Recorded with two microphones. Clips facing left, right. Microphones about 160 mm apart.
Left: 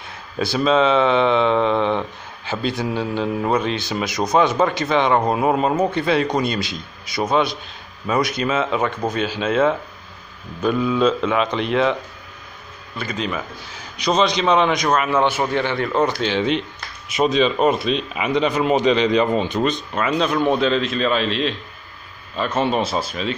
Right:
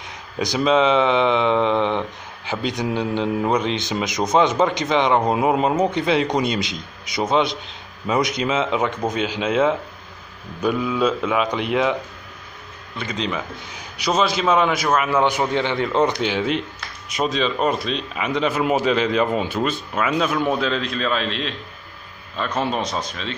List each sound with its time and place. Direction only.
0.4 s a man's voice: 15° right (ahead or behind)
13.9 s a man's voice: 10° right (ahead or behind); by 23.3 s 5° left (ahead or behind)